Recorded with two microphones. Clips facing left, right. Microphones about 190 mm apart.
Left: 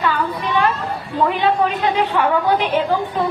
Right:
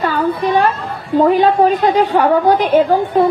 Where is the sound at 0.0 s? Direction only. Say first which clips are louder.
Right 5 dB; 40° right (ahead or behind).